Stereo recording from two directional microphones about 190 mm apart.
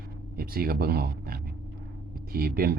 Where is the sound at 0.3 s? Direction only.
55° right (ahead or behind).